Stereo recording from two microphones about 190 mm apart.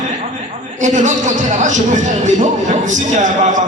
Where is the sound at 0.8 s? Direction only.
40° right (ahead or behind).